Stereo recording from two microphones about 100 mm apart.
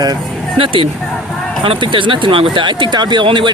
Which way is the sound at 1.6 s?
60° right (ahead or behind).